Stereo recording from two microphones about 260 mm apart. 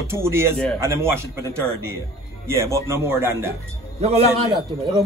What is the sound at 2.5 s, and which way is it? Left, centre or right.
A man's voice, centre.